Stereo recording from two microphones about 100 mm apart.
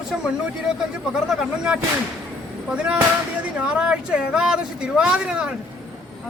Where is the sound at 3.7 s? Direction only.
10° right (ahead or behind).